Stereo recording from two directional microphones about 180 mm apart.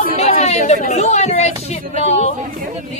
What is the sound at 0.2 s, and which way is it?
Chatter, 35° left (ahead or behind).